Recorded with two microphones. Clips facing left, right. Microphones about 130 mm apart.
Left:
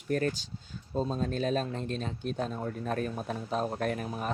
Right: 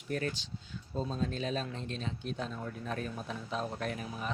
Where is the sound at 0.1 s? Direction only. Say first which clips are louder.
Left 6 dB; 45° left (ahead or behind).